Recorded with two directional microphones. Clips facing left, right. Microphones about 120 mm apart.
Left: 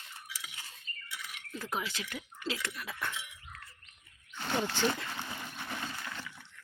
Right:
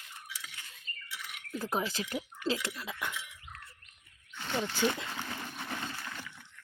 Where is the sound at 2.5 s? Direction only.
25° right (ahead or behind).